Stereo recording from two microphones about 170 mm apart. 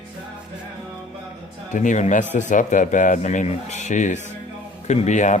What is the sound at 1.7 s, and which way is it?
Speech, 45° left (ahead or behind).